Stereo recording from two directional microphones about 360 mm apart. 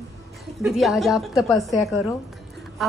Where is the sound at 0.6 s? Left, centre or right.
Centre.